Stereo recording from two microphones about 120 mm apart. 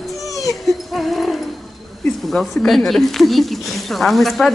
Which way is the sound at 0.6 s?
Centre (ahead or behind).